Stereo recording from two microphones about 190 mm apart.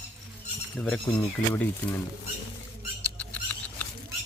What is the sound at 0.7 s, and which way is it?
Speech, 5° left (ahead or behind).